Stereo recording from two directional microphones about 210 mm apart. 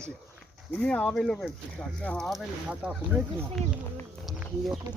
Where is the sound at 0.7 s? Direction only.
5° left (ahead or behind).